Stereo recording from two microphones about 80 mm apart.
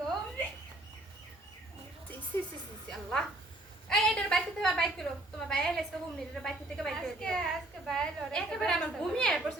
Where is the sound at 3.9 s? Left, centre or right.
Centre.